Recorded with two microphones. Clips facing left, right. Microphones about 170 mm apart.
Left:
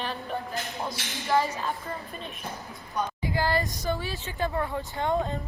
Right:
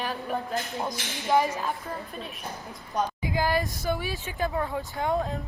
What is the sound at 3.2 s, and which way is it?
A woman's voice, 15° right (ahead or behind).